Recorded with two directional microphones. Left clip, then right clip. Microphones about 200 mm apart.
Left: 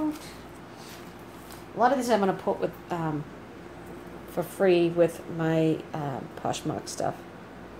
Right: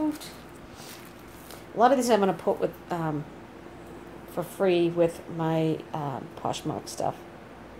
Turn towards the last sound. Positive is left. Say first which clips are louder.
# even
turn(degrees=0)  # may be behind; listen again after turning